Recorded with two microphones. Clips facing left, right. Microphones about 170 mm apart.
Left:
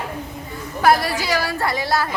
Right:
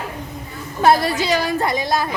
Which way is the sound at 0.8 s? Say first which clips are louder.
Right 2 dB; 25° right (ahead or behind).